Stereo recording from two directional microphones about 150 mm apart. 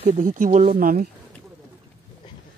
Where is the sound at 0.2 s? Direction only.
60° right (ahead or behind).